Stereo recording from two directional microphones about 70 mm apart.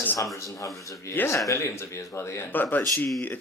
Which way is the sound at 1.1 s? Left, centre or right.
Left.